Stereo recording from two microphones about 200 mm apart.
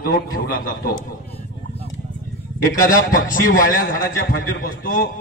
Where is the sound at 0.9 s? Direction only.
30° left (ahead or behind).